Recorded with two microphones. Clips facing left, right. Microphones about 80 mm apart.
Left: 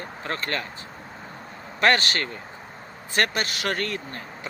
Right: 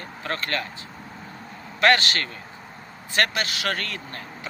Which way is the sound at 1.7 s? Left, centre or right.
Left.